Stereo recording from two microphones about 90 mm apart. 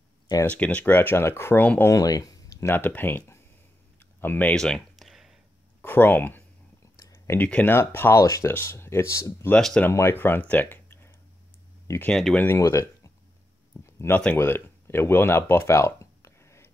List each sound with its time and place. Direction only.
0.5 s speech: 15° left (ahead or behind)
1.9 s speech: 40° left (ahead or behind)
2.7 s speech: 20° left (ahead or behind)
4.6 s a sound: 5° left (ahead or behind)
5.8 s speech: 20° left (ahead or behind)
7.0 s a sound: 40° left (ahead or behind)
7.3 s speech: 15° left (ahead or behind)
12.1 s speech: 5° left (ahead or behind)
12.5 s speech: 35° left (ahead or behind)
13.8 s a sound: 30° left (ahead or behind)
14.1 s speech: 15° left (ahead or behind)
14.4 s a sound: 25° left (ahead or behind)